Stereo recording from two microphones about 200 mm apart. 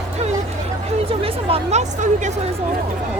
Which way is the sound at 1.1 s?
30° right (ahead or behind).